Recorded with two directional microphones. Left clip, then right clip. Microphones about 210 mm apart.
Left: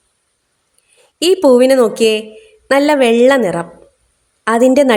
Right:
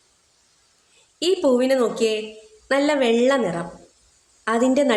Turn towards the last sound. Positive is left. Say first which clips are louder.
# left 9 dB
turn(degrees=45)  # may be behind; listen again after turning